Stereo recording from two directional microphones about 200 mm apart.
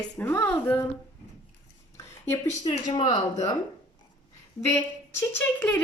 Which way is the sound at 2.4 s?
35° left (ahead or behind).